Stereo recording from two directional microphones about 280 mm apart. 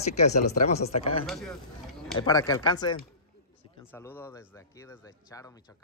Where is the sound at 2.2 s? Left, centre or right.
Centre.